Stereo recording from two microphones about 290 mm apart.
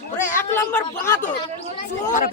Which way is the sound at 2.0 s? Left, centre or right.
Left.